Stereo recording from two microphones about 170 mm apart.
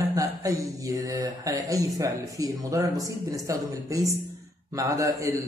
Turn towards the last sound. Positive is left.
turn(degrees=-20)  # may be behind; listen again after turning